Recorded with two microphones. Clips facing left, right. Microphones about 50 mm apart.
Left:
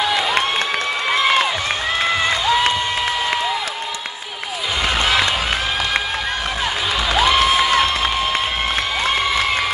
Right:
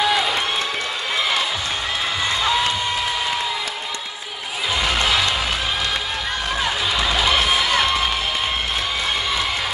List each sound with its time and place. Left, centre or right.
7.5 s crowd: centre